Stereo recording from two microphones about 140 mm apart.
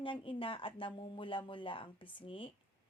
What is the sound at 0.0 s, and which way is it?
A woman's voice, 40° left (ahead or behind).